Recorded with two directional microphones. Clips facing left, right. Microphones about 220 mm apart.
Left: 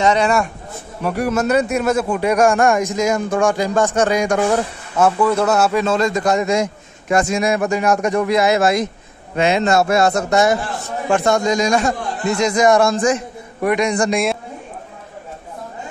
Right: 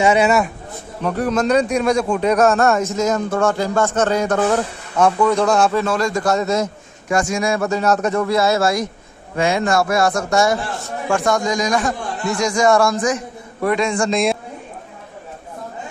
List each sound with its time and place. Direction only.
0.0 s speech: 5° right (ahead or behind)
1.0 s speech: 10° left (ahead or behind)
5.9 s a man's voice: 20° left (ahead or behind)
13.6 s speech: 15° left (ahead or behind)